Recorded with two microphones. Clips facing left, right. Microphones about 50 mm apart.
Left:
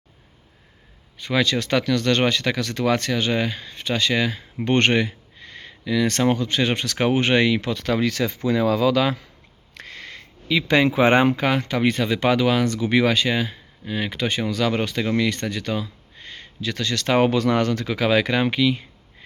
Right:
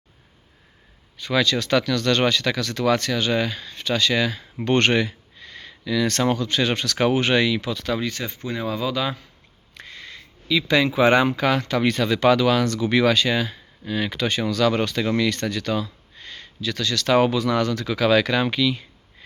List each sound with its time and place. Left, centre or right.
1.2 s speech: left
8.0 s speech: left
9.7 s a sound: left
11.3 s speech: left
16.6 s speech: left